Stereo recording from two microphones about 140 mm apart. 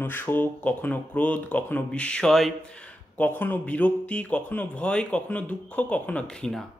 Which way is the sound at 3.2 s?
15° left (ahead or behind).